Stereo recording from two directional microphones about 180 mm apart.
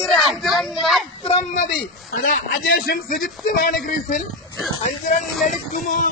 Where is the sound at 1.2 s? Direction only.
40° left (ahead or behind).